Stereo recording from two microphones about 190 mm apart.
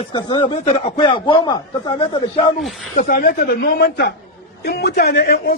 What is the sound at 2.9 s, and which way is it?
A man's voice, 45° left (ahead or behind).